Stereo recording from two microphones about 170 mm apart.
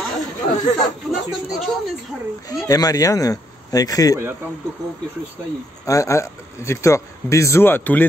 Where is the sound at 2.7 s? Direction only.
20° left (ahead or behind).